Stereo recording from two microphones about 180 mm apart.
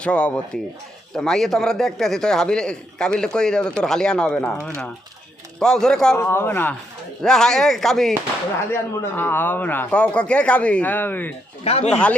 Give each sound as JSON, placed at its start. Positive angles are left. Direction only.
{"t": 0.0, "sound": "a man's voice", "side_deg": 5}
{"t": 5.5, "sound": "a man's voice", "side_deg": 5}
{"t": 8.7, "sound": "speech", "side_deg": 10}
{"t": 11.6, "sound": "speech", "side_deg": 35}
{"t": 11.9, "sound": "speech", "side_deg": 5}